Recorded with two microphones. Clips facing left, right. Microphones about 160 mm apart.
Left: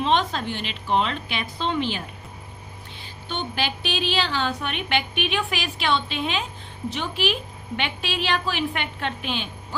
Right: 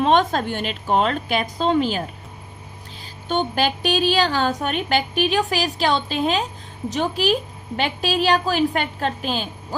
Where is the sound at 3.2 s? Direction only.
45° right (ahead or behind).